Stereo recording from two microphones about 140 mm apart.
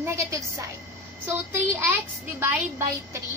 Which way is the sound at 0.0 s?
20° right (ahead or behind).